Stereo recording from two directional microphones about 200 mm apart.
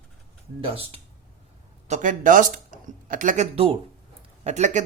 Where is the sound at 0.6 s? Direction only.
30° right (ahead or behind).